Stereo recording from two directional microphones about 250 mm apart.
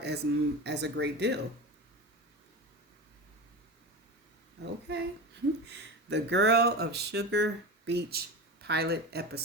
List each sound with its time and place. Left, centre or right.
0.0 s speech: right
4.9 s speech: right